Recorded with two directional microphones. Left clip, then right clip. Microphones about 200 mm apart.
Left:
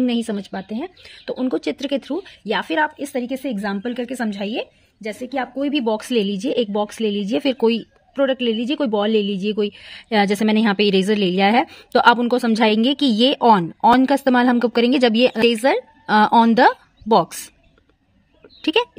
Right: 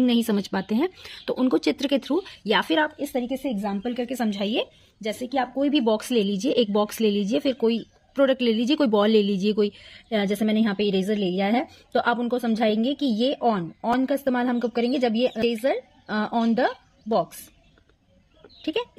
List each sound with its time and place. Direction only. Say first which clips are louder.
0.0 s speech: left 1 dB; 5° left (ahead or behind)
0.5 s speech: right 3 dB; 15° right (ahead or behind)
3.0 s a woman's voice: left 3 dB; 20° left (ahead or behind)
7.4 s a woman's voice: left 7 dB; 25° left (ahead or behind)
8.1 s speech: left 2 dB; 5° left (ahead or behind); by 17.4 s 45° left (ahead or behind)
18.6 s speech: left 9 dB; 40° left (ahead or behind)